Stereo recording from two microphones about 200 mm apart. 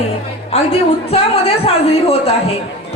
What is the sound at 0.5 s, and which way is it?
A woman's voice, 30° left (ahead or behind).